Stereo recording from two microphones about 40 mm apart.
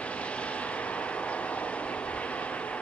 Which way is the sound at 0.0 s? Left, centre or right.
Left.